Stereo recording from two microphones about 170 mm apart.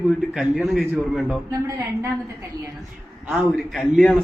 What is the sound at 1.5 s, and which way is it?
Speech, 15° right (ahead or behind).